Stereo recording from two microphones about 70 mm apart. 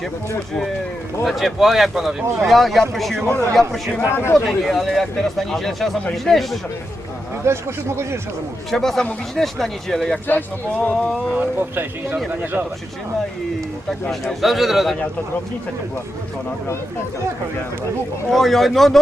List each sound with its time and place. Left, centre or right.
1.2 s speech: centre
4.1 s speech: left
4.4 s speech: centre
7.4 s speech: right
8.7 s speech: centre
10.2 s speech: left
10.9 s speech: centre
11.3 s speech: right
14.4 s speech: centre
18.3 s speech: centre